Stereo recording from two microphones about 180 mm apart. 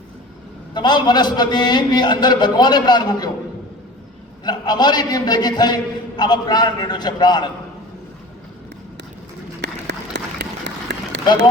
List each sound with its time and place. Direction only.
0.7 s a man's voice: 25° left (ahead or behind)
4.4 s a man's voice: 25° left (ahead or behind)
9.6 s a sound: 75° right (ahead or behind)